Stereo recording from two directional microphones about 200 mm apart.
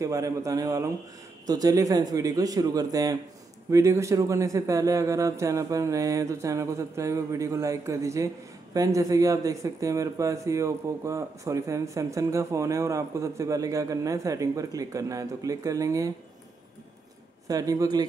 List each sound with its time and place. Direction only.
0.0 s speech: 15° right (ahead or behind)
17.5 s speech: 15° right (ahead or behind)